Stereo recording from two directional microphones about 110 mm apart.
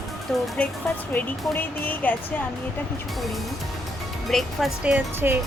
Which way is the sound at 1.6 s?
15° left (ahead or behind).